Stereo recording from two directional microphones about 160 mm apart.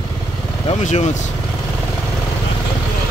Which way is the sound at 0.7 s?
50° left (ahead or behind).